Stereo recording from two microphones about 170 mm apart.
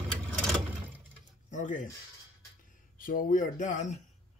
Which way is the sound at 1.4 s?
50° left (ahead or behind).